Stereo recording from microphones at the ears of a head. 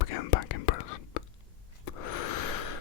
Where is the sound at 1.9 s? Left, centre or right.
Left.